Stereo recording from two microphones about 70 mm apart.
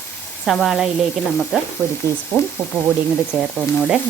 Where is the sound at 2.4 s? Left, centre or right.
Left.